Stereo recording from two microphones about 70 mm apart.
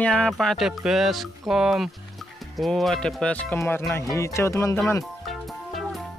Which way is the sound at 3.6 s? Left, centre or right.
Left.